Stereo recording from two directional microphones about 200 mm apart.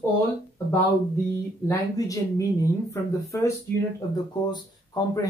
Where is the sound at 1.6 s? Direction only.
15° left (ahead or behind).